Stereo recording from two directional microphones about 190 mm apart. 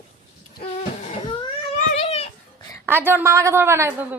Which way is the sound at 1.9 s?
30° left (ahead or behind).